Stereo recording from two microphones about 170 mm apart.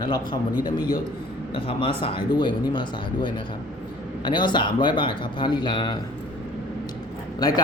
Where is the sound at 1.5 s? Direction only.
30° left (ahead or behind).